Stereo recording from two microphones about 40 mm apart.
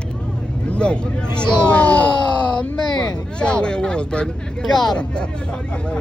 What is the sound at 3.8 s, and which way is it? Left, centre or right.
Speech, left.